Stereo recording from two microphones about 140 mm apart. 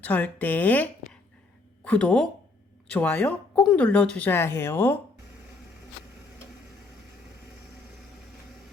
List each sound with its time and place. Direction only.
0.0 s a woman's voice: 10° left (ahead or behind)